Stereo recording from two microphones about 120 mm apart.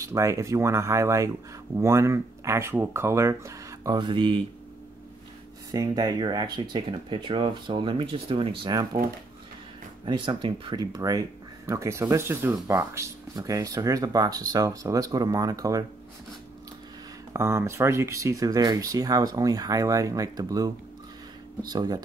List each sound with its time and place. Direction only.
0.0 s speech: 25° right (ahead or behind); by 4.4 s 40° right (ahead or behind)
5.7 s speech: 35° right (ahead or behind)
17.3 s speech: 25° right (ahead or behind)